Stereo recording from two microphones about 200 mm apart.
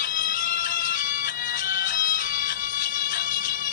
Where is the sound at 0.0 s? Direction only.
45° left (ahead or behind).